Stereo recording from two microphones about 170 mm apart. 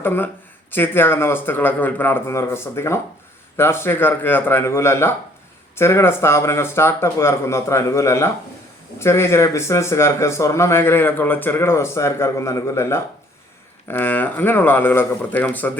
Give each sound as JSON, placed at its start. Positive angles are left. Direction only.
{"t": 0.0, "sound": "speech", "side_deg": 10}